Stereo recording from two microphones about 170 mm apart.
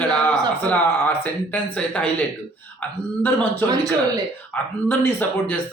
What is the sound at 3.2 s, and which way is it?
Speech, 10° left (ahead or behind).